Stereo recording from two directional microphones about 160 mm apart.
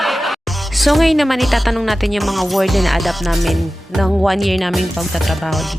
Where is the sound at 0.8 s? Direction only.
Centre (ahead or behind).